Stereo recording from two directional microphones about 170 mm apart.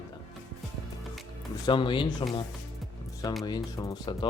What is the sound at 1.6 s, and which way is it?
Speech, 30° left (ahead or behind).